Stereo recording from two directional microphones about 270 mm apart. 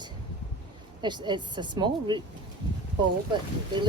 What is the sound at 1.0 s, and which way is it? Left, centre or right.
Speech, centre.